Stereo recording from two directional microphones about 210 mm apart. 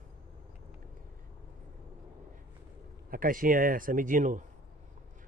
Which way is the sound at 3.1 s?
40° right (ahead or behind).